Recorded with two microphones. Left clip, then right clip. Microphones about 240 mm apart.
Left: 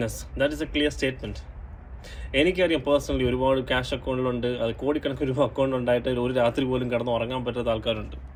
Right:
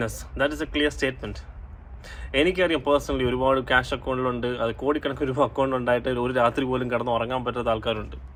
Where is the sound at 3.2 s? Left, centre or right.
Centre.